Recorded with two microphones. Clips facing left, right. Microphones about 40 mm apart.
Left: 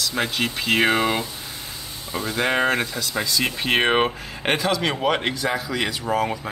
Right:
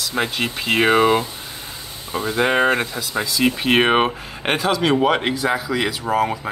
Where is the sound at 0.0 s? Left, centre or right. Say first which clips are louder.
Right 2 dB; centre.